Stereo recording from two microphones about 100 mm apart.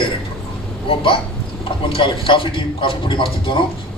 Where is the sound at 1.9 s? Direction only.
60° left (ahead or behind).